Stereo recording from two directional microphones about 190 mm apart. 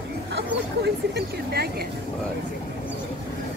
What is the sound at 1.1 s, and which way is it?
Speech, 55° right (ahead or behind).